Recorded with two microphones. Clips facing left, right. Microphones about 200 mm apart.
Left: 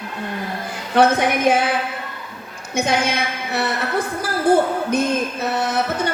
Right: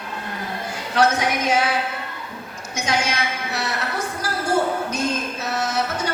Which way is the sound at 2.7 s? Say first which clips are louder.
Left 4 dB; 55° left (ahead or behind).